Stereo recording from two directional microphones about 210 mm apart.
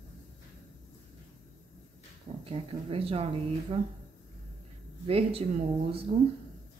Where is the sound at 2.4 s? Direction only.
25° right (ahead or behind).